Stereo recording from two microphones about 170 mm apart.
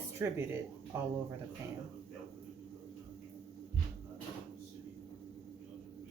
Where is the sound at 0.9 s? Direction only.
15° right (ahead or behind).